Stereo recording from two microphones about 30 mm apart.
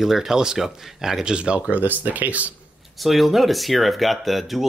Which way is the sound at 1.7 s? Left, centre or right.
Right.